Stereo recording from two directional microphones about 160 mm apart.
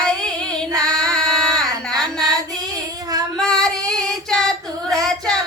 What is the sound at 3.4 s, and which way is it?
Female singing, 5° left (ahead or behind).